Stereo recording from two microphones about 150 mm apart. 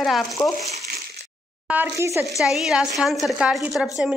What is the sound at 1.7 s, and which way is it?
Speech, 15° right (ahead or behind).